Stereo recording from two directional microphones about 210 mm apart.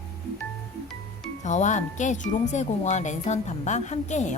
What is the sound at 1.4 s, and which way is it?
A woman's voice, 35° left (ahead or behind).